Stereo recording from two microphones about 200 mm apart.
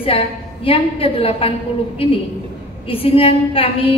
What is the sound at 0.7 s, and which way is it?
Speech, 30° left (ahead or behind).